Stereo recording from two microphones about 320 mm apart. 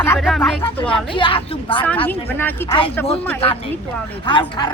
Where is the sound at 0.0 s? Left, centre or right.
Centre.